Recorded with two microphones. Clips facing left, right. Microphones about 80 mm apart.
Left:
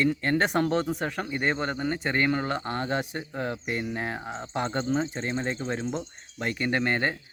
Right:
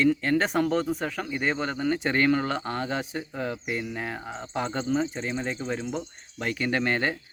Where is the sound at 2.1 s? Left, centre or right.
Centre.